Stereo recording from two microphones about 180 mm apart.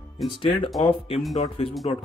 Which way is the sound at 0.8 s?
30° left (ahead or behind).